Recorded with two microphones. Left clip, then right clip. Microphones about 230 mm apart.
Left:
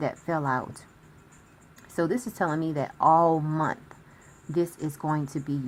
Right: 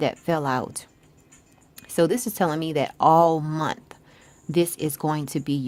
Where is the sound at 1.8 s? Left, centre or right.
Right.